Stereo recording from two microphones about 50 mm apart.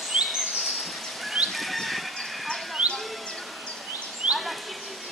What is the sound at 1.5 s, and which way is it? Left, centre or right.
Fowl, centre.